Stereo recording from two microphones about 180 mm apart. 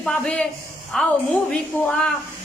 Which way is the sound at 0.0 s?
5° left (ahead or behind).